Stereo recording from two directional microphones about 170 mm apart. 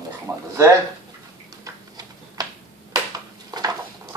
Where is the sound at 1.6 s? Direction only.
20° right (ahead or behind).